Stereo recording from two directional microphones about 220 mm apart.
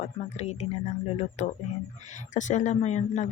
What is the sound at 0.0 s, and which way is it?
Speech, 30° left (ahead or behind).